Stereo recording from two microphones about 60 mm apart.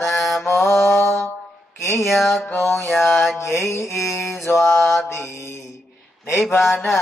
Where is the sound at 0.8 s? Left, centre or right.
Left.